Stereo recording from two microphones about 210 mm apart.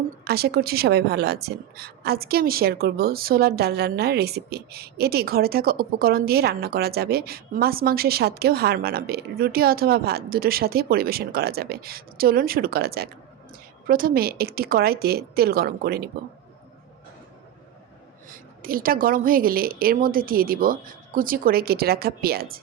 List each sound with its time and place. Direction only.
0.3 s a woman's voice: 50° right (ahead or behind)
18.3 s a woman's voice: 45° right (ahead or behind)